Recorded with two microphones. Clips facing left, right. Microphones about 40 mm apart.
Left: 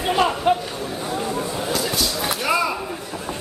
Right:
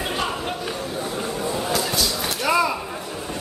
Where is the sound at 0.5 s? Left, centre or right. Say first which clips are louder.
Left 10 dB; left.